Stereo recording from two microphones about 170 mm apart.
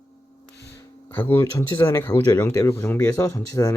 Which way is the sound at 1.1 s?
10° left (ahead or behind).